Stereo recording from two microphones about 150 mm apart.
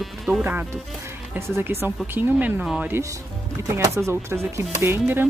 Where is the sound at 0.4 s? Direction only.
15° right (ahead or behind).